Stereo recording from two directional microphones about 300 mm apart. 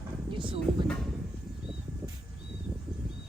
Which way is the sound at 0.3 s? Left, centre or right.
Centre.